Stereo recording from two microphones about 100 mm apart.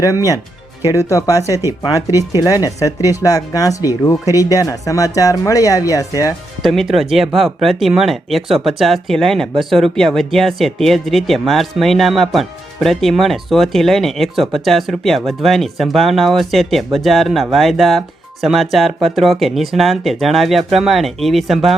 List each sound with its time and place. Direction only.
0.0 s speech: 35° left (ahead or behind)
6.6 s speech: centre (ahead or behind)